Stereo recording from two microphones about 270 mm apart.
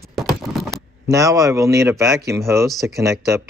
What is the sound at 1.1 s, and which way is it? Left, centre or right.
Speech, centre.